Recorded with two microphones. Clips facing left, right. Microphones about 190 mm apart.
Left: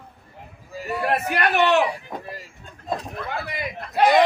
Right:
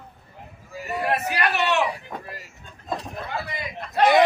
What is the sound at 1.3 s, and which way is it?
Speech, 60° left (ahead or behind).